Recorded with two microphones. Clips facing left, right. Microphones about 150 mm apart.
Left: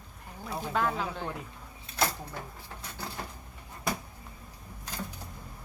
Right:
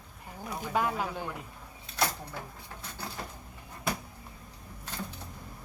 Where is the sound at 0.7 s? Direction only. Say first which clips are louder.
Even; 10° right (ahead or behind).